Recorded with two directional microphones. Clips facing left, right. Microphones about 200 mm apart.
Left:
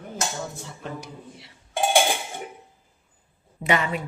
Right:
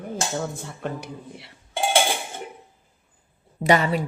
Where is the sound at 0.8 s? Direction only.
60° right (ahead or behind).